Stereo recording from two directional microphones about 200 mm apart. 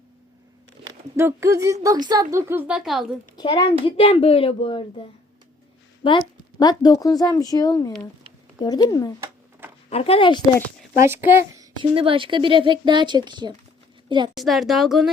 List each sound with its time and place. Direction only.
0.9 s speech: 15° right (ahead or behind)
3.3 s a child's voice: 25° left (ahead or behind)
6.0 s a woman's voice: 25° left (ahead or behind)
9.9 s speech: 30° left (ahead or behind)
11.0 s speech: 10° right (ahead or behind)
11.8 s speech: 25° right (ahead or behind)
14.3 s a woman's voice: centre (ahead or behind)